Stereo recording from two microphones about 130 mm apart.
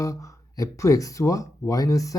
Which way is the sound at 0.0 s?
25° left (ahead or behind).